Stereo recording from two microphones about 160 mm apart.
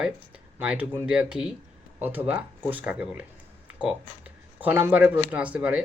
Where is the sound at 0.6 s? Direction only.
10° right (ahead or behind).